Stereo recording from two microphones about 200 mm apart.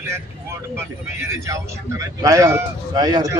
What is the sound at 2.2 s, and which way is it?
Speech, 15° right (ahead or behind).